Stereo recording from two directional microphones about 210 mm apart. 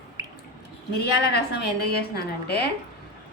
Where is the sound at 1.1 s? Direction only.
50° left (ahead or behind).